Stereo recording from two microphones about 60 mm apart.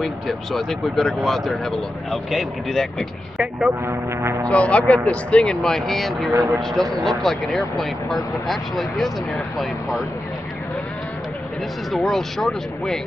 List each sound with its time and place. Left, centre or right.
0.0 s speech: centre
3.8 s speech: right
4.5 s speech: left; by 10.0 s centre
11.9 s speech: centre